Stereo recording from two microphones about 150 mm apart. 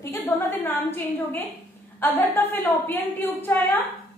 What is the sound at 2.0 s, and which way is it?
A woman's voice, 15° left (ahead or behind).